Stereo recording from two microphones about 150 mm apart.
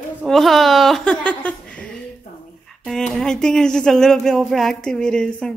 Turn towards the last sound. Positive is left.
turn(degrees=5)  # may be behind; listen again after turning